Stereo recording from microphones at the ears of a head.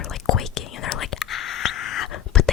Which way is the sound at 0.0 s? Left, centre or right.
Left.